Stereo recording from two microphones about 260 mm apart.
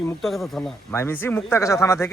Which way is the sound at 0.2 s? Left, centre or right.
Centre.